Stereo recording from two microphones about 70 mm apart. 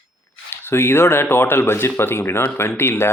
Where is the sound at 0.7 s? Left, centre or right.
Left.